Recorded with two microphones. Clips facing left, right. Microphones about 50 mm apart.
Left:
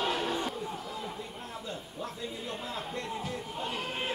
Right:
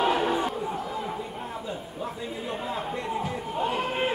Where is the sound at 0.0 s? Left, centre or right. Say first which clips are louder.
Right 7 dB; centre.